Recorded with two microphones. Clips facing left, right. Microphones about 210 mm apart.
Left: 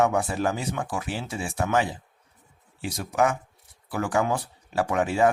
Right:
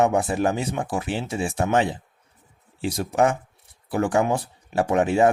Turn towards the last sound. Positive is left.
turn(degrees=-25)  # may be behind; listen again after turning